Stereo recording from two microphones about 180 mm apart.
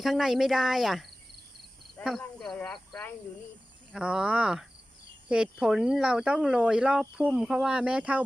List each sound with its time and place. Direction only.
0.0 s speech: centre (ahead or behind)
2.0 s speech: centre (ahead or behind)